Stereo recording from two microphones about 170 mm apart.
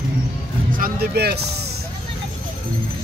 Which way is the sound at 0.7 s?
60° right (ahead or behind).